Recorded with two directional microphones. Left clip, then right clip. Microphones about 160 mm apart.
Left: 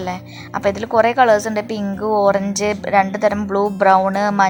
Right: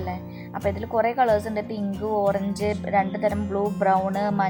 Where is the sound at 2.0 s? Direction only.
40° left (ahead or behind).